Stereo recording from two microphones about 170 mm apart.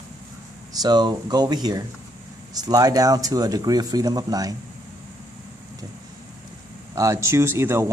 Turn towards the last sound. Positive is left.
turn(degrees=-15)  # may be behind; listen again after turning